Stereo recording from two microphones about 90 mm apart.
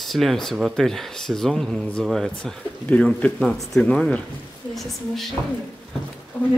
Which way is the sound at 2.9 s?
15° left (ahead or behind).